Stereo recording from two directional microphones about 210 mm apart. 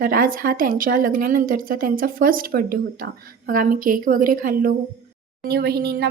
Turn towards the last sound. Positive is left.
turn(degrees=-50)  # may be behind; listen again after turning